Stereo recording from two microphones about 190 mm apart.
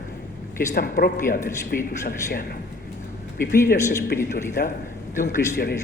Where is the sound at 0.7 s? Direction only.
50° left (ahead or behind).